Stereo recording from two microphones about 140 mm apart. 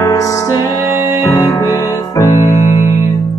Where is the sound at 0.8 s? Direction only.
20° right (ahead or behind).